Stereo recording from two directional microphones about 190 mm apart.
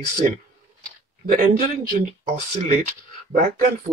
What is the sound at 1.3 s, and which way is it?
Speech, 45° right (ahead or behind).